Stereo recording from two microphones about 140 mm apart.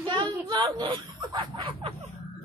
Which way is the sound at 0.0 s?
35° right (ahead or behind).